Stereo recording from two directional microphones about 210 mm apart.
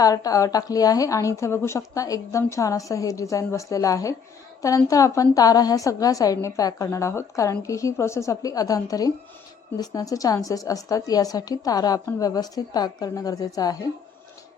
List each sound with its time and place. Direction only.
0.0 s a woman's voice: 15° left (ahead or behind)